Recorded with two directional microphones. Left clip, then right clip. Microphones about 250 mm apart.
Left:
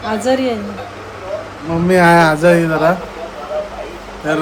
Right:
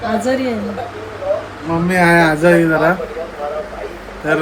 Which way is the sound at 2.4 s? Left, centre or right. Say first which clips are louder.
Even; centre.